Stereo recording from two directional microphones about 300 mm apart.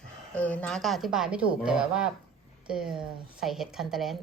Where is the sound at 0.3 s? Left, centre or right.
Centre.